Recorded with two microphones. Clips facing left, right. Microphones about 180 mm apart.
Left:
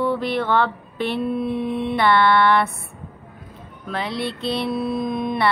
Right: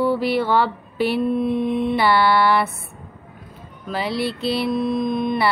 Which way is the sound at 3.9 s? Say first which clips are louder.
Right 2 dB; 5° right (ahead or behind).